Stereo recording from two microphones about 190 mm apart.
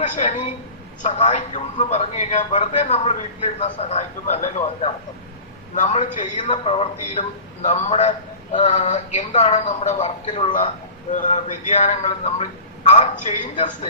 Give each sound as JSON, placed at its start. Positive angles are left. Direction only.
{"t": 0.0, "sound": "a woman's voice", "side_deg": 40}